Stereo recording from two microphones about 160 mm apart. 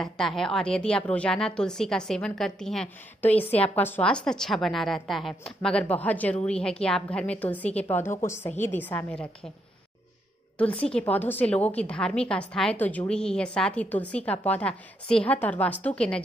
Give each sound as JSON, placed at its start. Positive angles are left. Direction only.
{"t": 0.0, "sound": "a woman's voice", "side_deg": 5}
{"t": 10.7, "sound": "a woman's voice", "side_deg": 35}
{"t": 11.0, "sound": "a woman's voice", "side_deg": 10}